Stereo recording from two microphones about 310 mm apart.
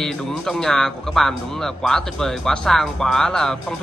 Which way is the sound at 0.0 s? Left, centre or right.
Centre.